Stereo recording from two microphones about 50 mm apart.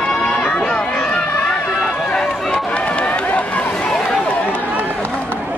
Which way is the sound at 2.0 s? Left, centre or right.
Centre.